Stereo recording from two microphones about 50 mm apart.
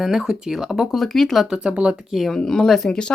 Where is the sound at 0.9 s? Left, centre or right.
Centre.